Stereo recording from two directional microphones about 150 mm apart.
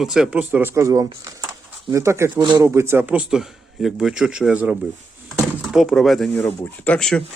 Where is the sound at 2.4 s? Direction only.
30° right (ahead or behind).